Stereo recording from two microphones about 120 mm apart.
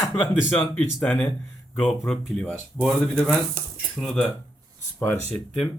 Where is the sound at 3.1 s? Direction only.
15° right (ahead or behind).